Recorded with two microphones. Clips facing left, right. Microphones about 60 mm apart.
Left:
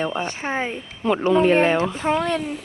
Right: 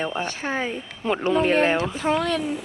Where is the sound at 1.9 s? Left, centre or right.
Left.